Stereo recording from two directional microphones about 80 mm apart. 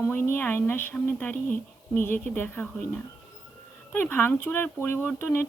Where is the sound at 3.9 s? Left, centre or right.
Left.